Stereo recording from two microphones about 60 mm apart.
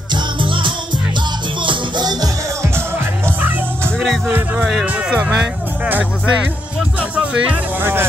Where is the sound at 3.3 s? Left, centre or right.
Right.